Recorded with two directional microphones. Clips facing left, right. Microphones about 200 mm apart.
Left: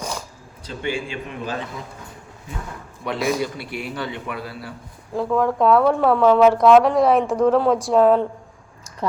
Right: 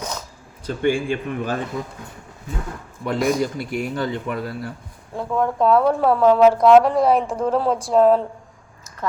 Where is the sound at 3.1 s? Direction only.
45° right (ahead or behind).